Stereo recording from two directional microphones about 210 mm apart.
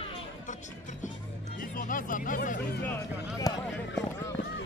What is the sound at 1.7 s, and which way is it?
Speech, 40° left (ahead or behind).